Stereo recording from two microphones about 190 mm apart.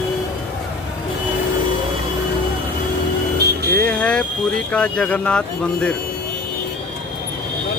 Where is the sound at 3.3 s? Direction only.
55° right (ahead or behind).